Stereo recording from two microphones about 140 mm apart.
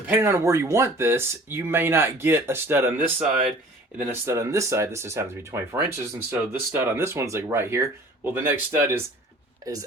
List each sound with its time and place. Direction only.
0.1 s speech: 15° right (ahead or behind)